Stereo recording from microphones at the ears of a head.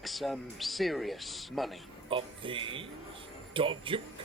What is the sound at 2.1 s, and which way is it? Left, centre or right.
Speech, right.